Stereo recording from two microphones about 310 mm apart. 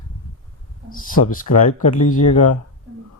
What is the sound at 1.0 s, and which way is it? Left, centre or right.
Speech, left.